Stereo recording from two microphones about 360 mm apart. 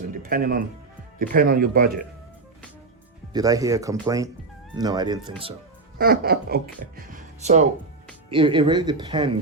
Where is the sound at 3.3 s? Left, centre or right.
Centre.